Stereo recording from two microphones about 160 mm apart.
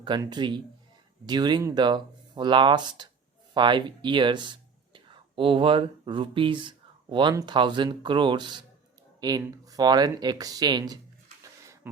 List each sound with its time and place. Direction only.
0.0 s speech: 30° right (ahead or behind)